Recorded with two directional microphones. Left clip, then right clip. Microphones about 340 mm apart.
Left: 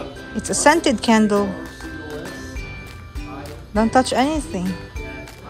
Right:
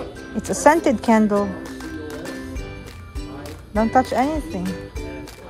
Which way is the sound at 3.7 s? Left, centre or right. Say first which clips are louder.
Left 1 dB; centre.